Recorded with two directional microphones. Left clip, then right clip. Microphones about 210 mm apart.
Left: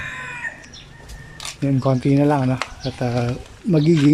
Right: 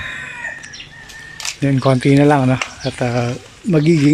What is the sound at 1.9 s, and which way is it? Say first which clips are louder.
Speech: right 6 dB; 5° left (ahead or behind).